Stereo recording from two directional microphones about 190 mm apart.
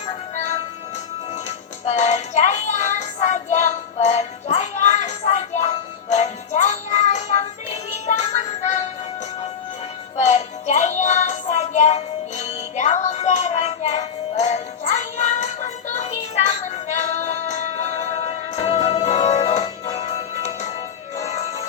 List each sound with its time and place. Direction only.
1.5 s music: 35° left (ahead or behind)
10.2 s music: 35° left (ahead or behind)